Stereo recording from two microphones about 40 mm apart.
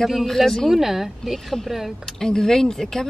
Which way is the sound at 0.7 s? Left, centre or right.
Centre.